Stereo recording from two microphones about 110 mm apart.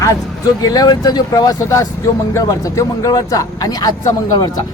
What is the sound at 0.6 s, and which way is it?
Speech, 35° left (ahead or behind).